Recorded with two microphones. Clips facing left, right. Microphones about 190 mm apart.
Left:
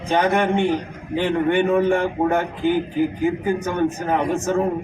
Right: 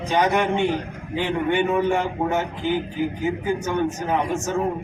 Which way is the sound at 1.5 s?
50° left (ahead or behind).